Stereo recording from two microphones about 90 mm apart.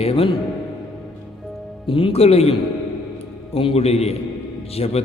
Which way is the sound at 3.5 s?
90° left.